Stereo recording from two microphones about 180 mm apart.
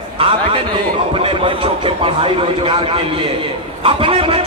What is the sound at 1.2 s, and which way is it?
A man's voice, 30° right (ahead or behind).